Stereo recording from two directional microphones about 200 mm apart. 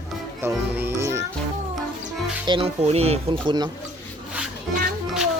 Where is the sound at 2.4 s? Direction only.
25° right (ahead or behind).